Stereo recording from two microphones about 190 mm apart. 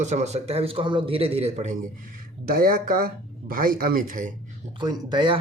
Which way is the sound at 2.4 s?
50° right (ahead or behind).